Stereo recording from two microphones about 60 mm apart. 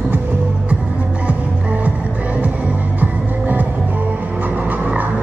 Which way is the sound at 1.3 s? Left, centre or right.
Right.